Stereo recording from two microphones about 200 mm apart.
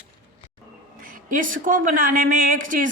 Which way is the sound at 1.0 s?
40° right (ahead or behind).